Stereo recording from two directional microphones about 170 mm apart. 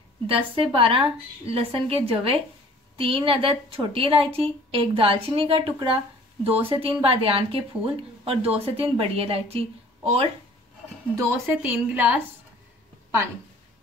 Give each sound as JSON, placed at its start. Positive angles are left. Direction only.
{"t": 0.7, "sound": "a woman's voice", "side_deg": -30}
{"t": 11.1, "sound": "a woman's voice", "side_deg": -15}